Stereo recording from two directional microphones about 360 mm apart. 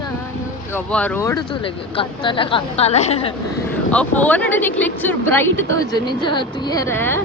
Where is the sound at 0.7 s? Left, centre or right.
Centre.